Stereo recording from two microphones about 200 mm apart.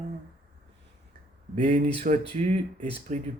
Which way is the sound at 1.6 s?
35° right (ahead or behind).